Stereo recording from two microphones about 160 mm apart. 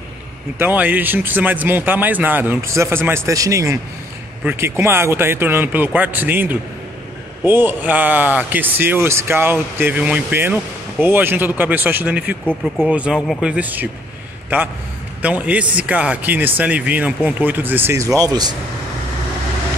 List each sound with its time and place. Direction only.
0.6 s a man's voice: 10° right (ahead or behind)
12.4 s a man's voice: centre (ahead or behind); by 18.6 s 25° right (ahead or behind)